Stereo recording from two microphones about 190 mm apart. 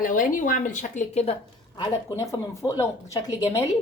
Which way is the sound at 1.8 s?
20° left (ahead or behind).